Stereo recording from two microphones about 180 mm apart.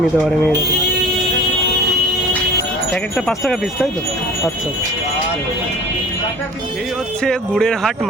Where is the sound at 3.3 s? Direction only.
Centre (ahead or behind).